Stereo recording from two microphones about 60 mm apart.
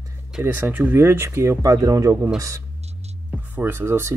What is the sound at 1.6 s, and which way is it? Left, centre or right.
Speech, right.